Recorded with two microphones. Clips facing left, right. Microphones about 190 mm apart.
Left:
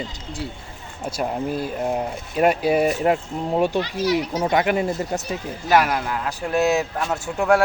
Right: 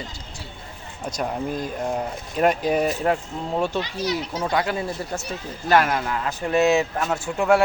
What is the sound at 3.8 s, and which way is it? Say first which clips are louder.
Speech: left 4 dB; 20° right (ahead or behind).